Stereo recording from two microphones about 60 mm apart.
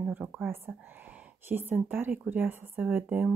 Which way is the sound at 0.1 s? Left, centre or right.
Right.